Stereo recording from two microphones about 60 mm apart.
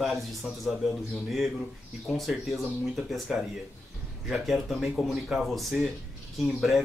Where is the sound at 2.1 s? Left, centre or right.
Centre.